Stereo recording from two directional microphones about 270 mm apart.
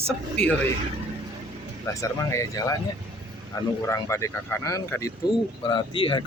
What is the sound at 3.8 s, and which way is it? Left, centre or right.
Speech, centre.